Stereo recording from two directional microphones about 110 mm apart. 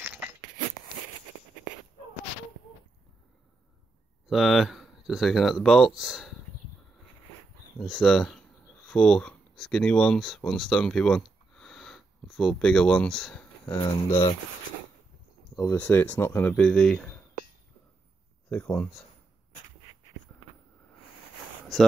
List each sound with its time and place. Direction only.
4.3 s speech: centre (ahead or behind)
7.8 s speech: 5° left (ahead or behind)
13.7 s speech: 40° left (ahead or behind)
15.7 s speech: 15° left (ahead or behind)
18.5 s speech: 15° left (ahead or behind)